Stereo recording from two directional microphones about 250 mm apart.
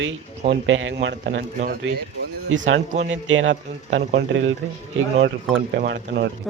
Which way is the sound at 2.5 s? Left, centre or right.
Right.